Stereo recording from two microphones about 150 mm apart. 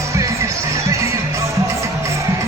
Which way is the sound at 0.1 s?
20° right (ahead or behind).